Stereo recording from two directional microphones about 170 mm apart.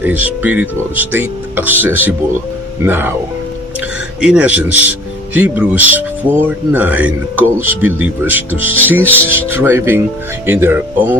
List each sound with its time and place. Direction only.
0.0 s speech: 10° right (ahead or behind)
4.2 s speech: 5° right (ahead or behind)